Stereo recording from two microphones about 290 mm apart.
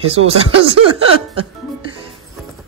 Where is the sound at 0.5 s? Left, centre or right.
Right.